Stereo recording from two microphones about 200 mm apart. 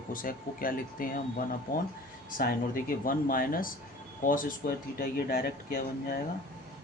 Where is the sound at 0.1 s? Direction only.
45° left (ahead or behind).